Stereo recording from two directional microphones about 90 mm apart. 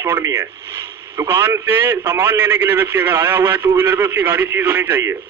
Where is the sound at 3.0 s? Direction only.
25° right (ahead or behind).